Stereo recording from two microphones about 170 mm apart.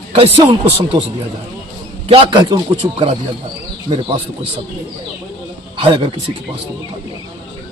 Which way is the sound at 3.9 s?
30° right (ahead or behind).